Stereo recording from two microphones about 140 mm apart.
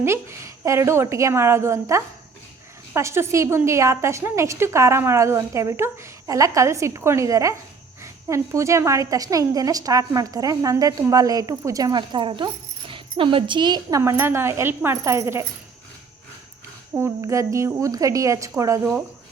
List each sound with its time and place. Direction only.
0.0 s a woman's voice: 20° right (ahead or behind)
14.0 s a woman's voice: 15° right (ahead or behind)
16.9 s a woman's voice: 20° right (ahead or behind)